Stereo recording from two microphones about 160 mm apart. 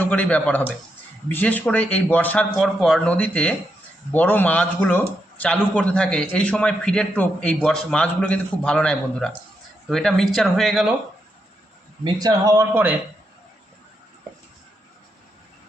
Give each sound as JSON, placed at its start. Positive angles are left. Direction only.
{"t": 0.0, "sound": "speech", "side_deg": 10}
{"t": 12.0, "sound": "speech", "side_deg": -20}